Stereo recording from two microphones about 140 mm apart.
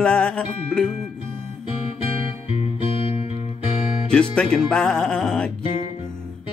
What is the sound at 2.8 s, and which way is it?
Music, 45° left (ahead or behind).